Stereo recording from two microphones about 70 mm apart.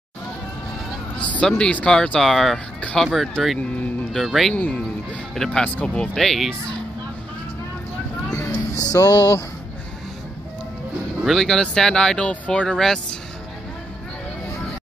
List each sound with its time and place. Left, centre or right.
1.1 s speech: centre
4.6 s speech: left
5.3 s speech: centre
5.6 s speech: centre
6.1 s speech: centre
8.3 s speech: left
11.2 s speech: centre